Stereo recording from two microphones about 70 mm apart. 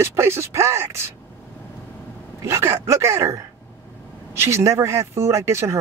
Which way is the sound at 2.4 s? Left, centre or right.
Right.